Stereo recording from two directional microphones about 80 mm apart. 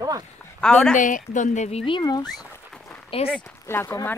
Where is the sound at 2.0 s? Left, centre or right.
Left.